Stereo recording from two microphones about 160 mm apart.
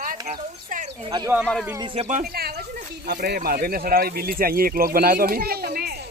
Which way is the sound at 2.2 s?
75° right (ahead or behind).